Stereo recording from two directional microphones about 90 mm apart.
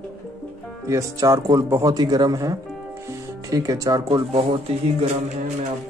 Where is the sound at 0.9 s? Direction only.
35° right (ahead or behind).